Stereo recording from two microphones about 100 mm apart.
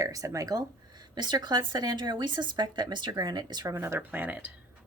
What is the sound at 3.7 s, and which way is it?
Speech, 25° right (ahead or behind).